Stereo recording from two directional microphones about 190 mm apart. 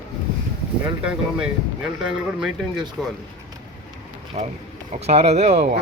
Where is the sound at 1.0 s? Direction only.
5° right (ahead or behind).